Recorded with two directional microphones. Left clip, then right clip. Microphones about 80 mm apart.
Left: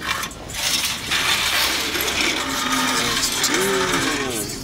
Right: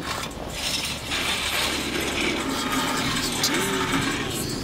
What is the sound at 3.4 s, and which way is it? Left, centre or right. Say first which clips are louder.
Vehicle: left 4 dB; left.